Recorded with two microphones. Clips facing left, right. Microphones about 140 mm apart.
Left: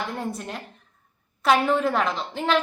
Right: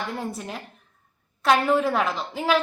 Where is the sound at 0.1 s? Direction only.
Centre (ahead or behind).